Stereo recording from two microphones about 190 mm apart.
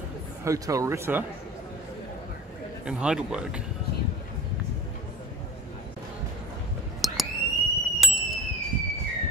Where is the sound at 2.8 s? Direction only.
5° right (ahead or behind).